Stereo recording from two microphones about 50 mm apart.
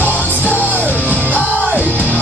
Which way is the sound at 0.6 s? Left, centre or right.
Left.